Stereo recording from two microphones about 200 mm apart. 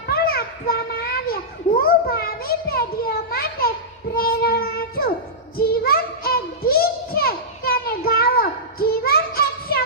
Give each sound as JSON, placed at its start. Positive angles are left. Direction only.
{"t": 0.1, "sound": "a sound", "side_deg": 50}
{"t": 1.8, "sound": "a child's voice", "side_deg": 50}
{"t": 5.5, "sound": "music", "side_deg": 50}